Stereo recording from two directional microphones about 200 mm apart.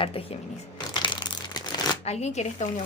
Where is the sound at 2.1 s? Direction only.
35° left (ahead or behind).